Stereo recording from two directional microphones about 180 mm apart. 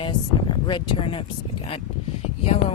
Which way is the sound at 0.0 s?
25° left (ahead or behind).